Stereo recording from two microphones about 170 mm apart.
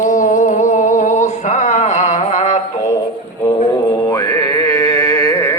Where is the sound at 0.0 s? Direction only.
50° left (ahead or behind).